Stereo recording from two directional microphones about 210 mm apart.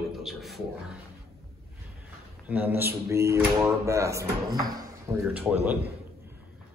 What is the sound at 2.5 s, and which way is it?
A man's voice, 10° right (ahead or behind).